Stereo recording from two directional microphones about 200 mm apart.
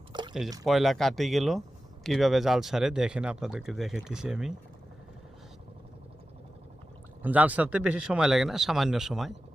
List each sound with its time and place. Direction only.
0.1 s a sound: 20° right (ahead or behind)
0.6 s speech: centre (ahead or behind)
7.2 s speech: 10° right (ahead or behind)